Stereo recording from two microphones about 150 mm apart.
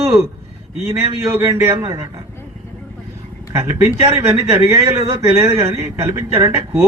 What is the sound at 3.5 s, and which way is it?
A man's voice, 20° right (ahead or behind).